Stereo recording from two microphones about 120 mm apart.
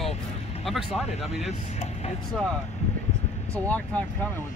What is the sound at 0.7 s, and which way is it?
Speech, centre (ahead or behind).